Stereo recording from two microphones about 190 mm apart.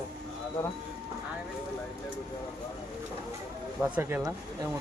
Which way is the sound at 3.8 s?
10° right (ahead or behind).